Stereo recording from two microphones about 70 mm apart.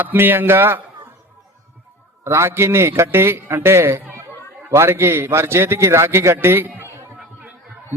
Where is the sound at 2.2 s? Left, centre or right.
Right.